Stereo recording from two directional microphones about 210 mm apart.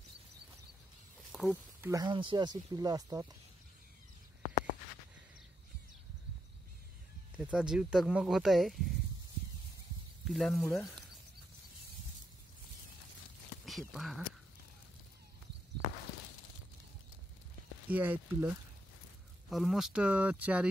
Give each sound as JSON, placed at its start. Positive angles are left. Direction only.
{"t": 1.3, "sound": "snake", "side_deg": 5}
{"t": 1.8, "sound": "speech", "side_deg": -15}
{"t": 7.3, "sound": "speech", "side_deg": -5}
{"t": 10.2, "sound": "speech", "side_deg": 0}
{"t": 10.5, "sound": "speech", "side_deg": 10}
{"t": 13.7, "sound": "speech", "side_deg": 0}
{"t": 17.8, "sound": "speech", "side_deg": -10}